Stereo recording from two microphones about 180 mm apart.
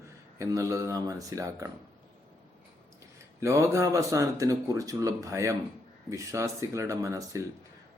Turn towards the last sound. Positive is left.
turn(degrees=-15)  # may be behind; listen again after turning